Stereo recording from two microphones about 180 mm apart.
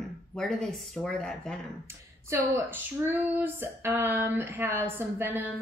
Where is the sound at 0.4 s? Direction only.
5° left (ahead or behind).